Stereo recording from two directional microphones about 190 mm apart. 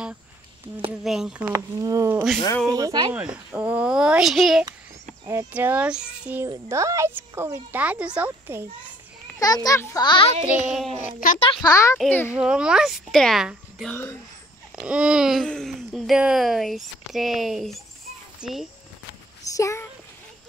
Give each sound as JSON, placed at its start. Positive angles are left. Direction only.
{"t": 1.0, "sound": "speech", "side_deg": 0}
{"t": 1.5, "sound": "speech", "side_deg": -15}
{"t": 3.2, "sound": "speech", "side_deg": -5}
{"t": 5.2, "sound": "speech", "side_deg": -20}
{"t": 9.4, "sound": "a child's voice", "side_deg": 20}
{"t": 10.4, "sound": "speech", "side_deg": 0}
{"t": 11.2, "sound": "a child's voice", "side_deg": 30}
{"t": 11.6, "sound": "a child's voice", "side_deg": 15}
{"t": 12.3, "sound": "speech", "side_deg": -5}
{"t": 19.5, "sound": "a child's voice", "side_deg": 15}